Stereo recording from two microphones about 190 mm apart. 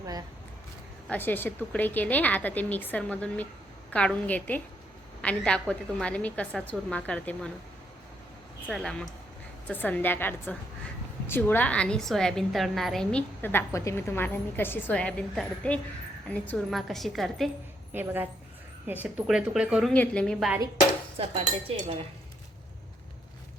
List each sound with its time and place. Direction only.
0.0 s speech: 20° right (ahead or behind)
1.0 s a woman's voice: 10° left (ahead or behind)
8.6 s a woman's voice: centre (ahead or behind)
17.9 s a woman's voice: 10° right (ahead or behind)
19.9 s a woman's voice: 5° left (ahead or behind)